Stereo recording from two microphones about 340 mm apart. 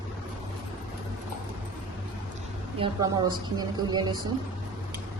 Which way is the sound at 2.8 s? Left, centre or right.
Centre.